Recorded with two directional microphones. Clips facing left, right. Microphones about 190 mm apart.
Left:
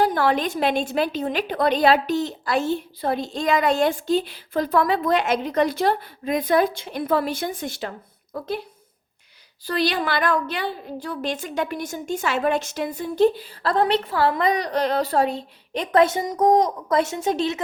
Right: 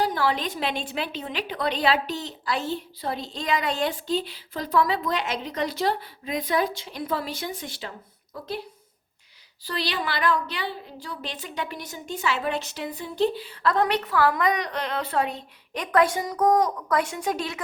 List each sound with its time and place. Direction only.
0.0 s a woman's voice: 55° left (ahead or behind)
9.6 s a woman's voice: 50° left (ahead or behind); by 17.6 s 25° left (ahead or behind)